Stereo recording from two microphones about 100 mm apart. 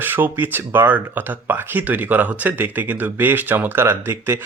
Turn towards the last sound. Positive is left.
turn(degrees=-25)  # may be behind; listen again after turning